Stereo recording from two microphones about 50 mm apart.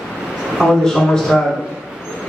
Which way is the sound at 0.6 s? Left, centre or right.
Centre.